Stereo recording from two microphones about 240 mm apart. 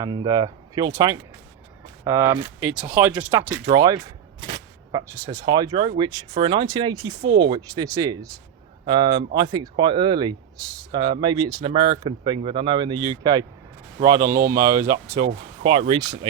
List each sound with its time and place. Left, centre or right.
0.0 s speech: centre